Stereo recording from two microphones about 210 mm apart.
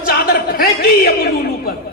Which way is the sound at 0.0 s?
45° left (ahead or behind).